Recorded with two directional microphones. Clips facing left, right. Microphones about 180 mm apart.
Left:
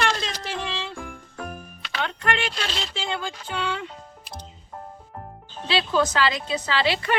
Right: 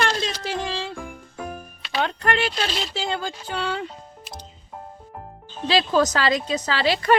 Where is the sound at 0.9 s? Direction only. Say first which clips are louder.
Right 1 dB; 5° right (ahead or behind).